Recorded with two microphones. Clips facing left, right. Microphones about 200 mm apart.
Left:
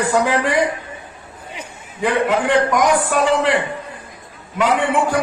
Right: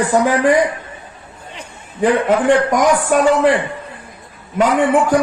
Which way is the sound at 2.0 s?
45° right (ahead or behind).